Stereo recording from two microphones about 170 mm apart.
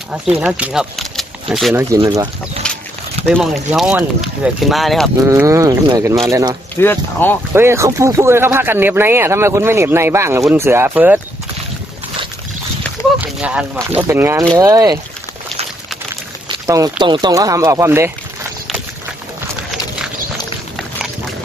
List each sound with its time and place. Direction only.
0.4 s speech: 5° right (ahead or behind)
2.0 s speech: 25° right (ahead or behind)
2.6 s a sound: 5° left (ahead or behind)
3.2 s speech: centre (ahead or behind)
5.2 s speech: 15° right (ahead or behind)
6.7 s speech: 15° left (ahead or behind)
7.5 s speech: 15° right (ahead or behind)
13.2 s speech: 5° right (ahead or behind)
16.6 s speech: 20° right (ahead or behind)